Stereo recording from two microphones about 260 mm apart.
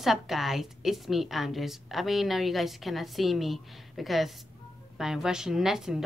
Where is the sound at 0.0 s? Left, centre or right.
Centre.